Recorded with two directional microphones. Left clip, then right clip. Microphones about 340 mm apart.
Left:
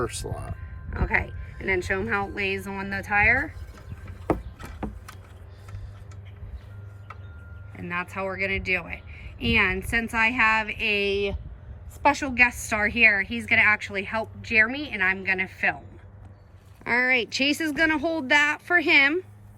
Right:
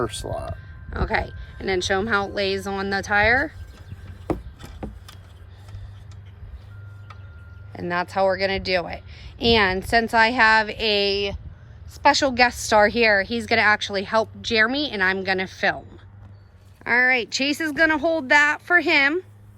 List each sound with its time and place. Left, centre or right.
0.0 s speech: right
0.9 s a woman's voice: centre
4.3 s a sound: centre
8.4 s a woman's voice: centre
16.8 s a woman's voice: centre